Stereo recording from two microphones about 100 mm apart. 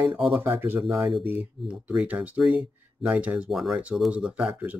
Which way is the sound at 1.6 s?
10° right (ahead or behind).